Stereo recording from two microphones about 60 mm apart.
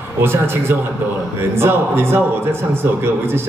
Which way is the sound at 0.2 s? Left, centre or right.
Right.